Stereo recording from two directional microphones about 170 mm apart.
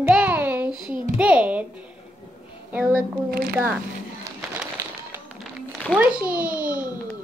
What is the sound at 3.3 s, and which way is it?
Speech, 60° right (ahead or behind).